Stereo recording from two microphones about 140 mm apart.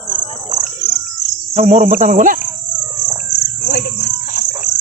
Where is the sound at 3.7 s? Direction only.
80° left.